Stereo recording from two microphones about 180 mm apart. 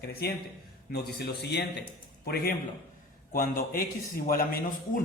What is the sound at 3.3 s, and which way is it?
A man's voice, 50° left (ahead or behind).